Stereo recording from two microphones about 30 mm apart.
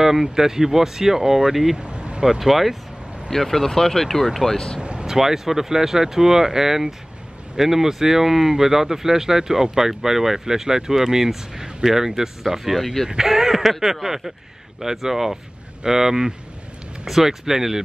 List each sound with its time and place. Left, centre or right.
0.0 s speech: centre
1.8 s a sound: right
2.2 s speech: centre
3.3 s speech: centre
5.0 s speech: centre